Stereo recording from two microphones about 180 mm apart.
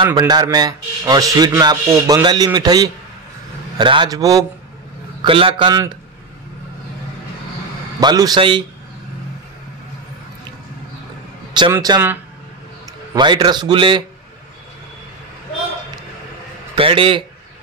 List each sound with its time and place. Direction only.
0.0 s speech: 25° right (ahead or behind)
8.0 s speech: 20° right (ahead or behind)
11.7 s speech: 15° right (ahead or behind)
16.7 s speech: 30° right (ahead or behind)